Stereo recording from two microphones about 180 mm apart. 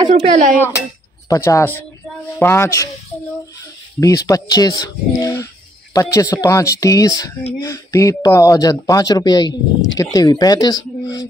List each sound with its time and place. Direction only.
0.1 s speech: 45° right (ahead or behind)
1.3 s speech: 15° left (ahead or behind)
4.0 s speech: 20° left (ahead or behind)